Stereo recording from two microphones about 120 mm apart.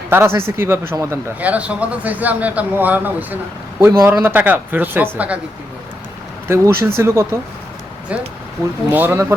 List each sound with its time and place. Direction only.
0.1 s speech: 20° right (ahead or behind)
6.5 s speech: 20° right (ahead or behind)
8.1 s speech: 10° right (ahead or behind)